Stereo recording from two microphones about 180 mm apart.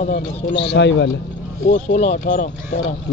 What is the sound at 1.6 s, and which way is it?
Speech, 40° left (ahead or behind).